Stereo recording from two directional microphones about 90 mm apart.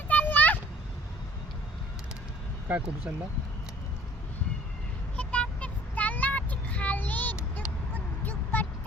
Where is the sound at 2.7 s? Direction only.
15° right (ahead or behind).